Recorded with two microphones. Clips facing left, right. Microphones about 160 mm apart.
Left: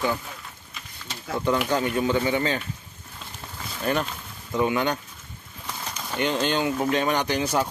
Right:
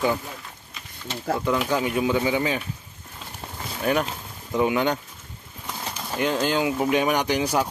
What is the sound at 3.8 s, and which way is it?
Speech, 10° right (ahead or behind).